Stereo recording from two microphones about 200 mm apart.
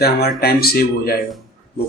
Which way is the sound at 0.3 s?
50° left (ahead or behind).